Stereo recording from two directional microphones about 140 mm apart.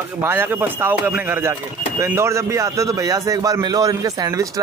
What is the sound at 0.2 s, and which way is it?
A man's voice, 15° right (ahead or behind).